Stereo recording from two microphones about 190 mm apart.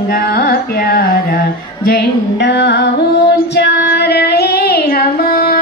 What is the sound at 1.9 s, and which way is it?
Music, 65° left (ahead or behind).